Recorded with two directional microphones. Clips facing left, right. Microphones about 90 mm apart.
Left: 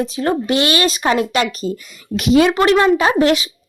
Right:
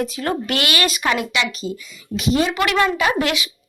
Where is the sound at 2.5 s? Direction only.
30° left (ahead or behind).